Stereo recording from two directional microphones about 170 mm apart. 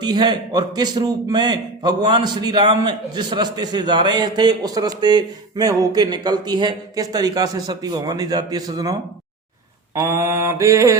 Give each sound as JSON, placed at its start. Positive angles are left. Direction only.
{"t": 0.0, "sound": "a man's voice", "side_deg": -25}
{"t": 9.9, "sound": "mantra", "side_deg": -15}